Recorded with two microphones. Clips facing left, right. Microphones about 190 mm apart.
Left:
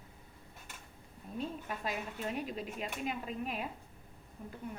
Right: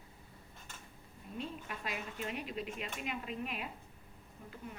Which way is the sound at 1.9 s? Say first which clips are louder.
Left 2 dB; 40° left (ahead or behind).